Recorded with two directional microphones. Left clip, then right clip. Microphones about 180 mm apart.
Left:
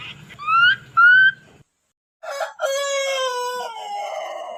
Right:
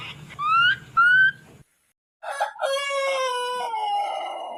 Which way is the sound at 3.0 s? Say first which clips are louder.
Left 2 dB; 15° left (ahead or behind).